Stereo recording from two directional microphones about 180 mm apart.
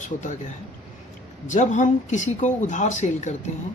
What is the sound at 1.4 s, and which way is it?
Speech, 45° left (ahead or behind).